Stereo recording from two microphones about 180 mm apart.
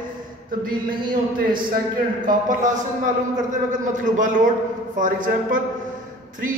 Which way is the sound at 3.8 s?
45° right (ahead or behind).